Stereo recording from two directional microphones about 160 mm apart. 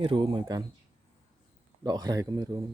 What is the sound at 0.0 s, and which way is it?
Speech, 30° right (ahead or behind).